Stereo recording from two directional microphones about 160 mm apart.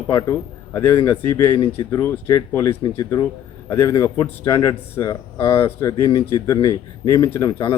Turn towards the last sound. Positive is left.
turn(degrees=20)  # may be behind; listen again after turning